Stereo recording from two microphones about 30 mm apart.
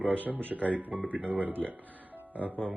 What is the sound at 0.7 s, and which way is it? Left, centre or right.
Speech, right.